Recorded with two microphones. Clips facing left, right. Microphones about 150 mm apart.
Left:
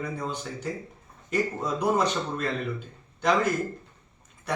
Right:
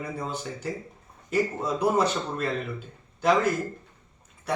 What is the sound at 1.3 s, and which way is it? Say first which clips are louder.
Speech: right 1 dB; 5° right (ahead or behind).